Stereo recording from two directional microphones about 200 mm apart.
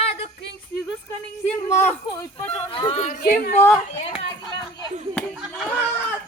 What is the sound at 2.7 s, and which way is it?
Speech, 25° left (ahead or behind).